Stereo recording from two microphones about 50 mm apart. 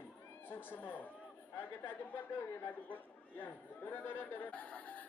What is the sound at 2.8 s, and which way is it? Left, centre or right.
Speech, left.